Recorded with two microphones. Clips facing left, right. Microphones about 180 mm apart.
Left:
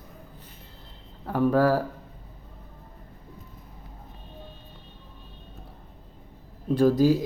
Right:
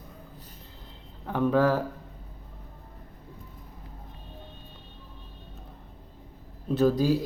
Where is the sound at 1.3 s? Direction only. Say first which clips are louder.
Left 2 dB; 5° left (ahead or behind).